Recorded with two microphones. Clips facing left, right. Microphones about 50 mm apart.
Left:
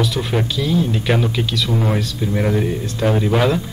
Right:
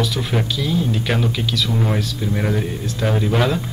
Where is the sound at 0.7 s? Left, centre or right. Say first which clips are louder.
Left 3 dB; centre.